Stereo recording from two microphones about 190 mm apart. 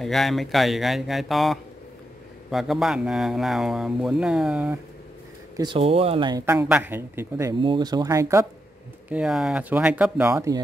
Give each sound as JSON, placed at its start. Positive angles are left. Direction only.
{"t": 0.0, "sound": "speech", "side_deg": 0}
{"t": 5.6, "sound": "speech", "side_deg": -25}
{"t": 6.4, "sound": "speech", "side_deg": -10}
{"t": 9.1, "sound": "speech", "side_deg": -5}